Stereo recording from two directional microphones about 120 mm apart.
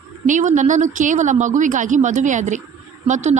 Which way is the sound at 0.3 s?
90° right.